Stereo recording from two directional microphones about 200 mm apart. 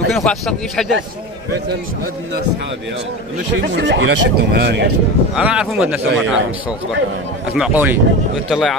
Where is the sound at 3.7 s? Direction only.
65° right (ahead or behind).